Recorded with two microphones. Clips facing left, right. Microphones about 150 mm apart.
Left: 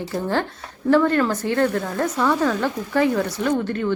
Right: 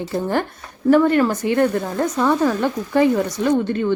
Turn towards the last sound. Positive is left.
turn(degrees=-20)  # may be behind; listen again after turning